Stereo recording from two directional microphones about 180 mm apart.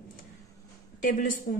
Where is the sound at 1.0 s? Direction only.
50° left (ahead or behind).